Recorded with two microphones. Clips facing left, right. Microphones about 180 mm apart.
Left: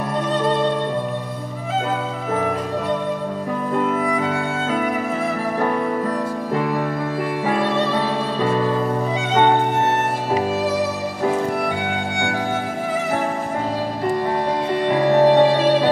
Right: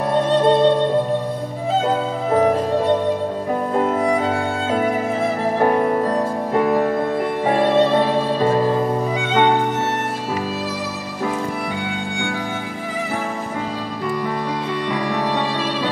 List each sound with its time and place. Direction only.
3.8 s music: 35° right (ahead or behind)
5.6 s music: 45° right (ahead or behind)
7.4 s music: 35° right (ahead or behind)
11.9 s music: 60° left (ahead or behind)
15.0 s music: 30° left (ahead or behind)
15.2 s music: 55° left (ahead or behind)